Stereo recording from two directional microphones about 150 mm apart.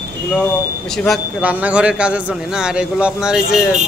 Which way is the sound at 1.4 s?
10° right (ahead or behind).